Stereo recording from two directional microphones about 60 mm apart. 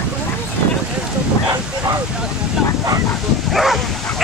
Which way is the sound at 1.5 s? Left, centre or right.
Right.